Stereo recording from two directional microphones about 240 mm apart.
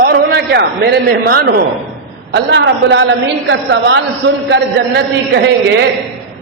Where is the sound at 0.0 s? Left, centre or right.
Right.